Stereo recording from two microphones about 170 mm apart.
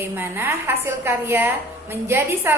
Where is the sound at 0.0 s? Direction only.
15° right (ahead or behind).